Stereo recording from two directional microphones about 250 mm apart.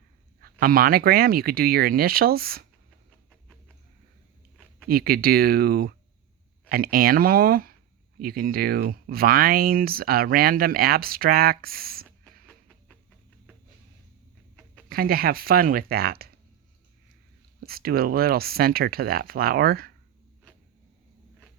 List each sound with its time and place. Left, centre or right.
0.6 s speech: right
4.9 s speech: right
12.0 s a sound: centre
14.8 s speech: right
17.6 s speech: right